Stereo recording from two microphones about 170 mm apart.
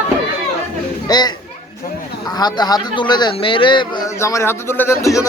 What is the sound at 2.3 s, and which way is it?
Speech, 25° left (ahead or behind).